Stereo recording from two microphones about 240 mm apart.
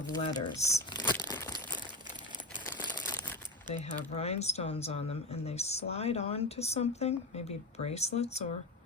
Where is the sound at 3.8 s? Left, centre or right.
Left.